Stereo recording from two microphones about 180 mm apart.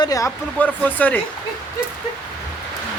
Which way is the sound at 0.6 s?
10° left (ahead or behind).